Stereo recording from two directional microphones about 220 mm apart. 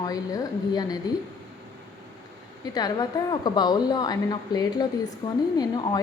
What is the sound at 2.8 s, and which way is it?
A woman's voice, 20° left (ahead or behind).